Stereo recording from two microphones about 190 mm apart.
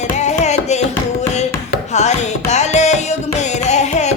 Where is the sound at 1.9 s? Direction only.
35° left (ahead or behind).